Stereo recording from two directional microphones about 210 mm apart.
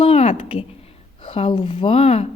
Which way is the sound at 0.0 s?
30° left (ahead or behind).